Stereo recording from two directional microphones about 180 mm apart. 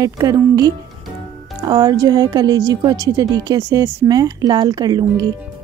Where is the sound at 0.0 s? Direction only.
20° right (ahead or behind).